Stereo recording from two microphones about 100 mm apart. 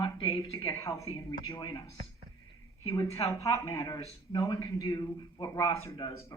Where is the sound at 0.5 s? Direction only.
30° left (ahead or behind).